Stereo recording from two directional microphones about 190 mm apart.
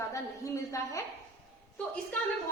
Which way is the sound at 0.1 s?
15° left (ahead or behind).